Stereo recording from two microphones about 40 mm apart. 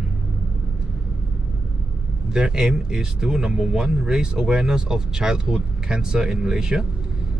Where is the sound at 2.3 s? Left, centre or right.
Centre.